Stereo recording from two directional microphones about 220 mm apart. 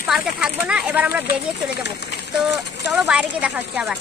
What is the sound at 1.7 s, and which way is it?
Speech, 50° left (ahead or behind).